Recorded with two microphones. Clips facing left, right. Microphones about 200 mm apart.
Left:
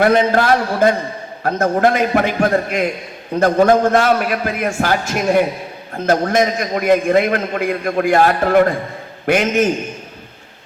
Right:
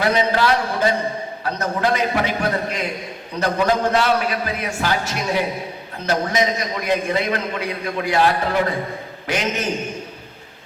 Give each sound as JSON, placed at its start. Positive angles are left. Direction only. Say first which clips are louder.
{"t": 0.0, "sound": "a man's voice", "louder": "left 5 dB", "side_deg": 50}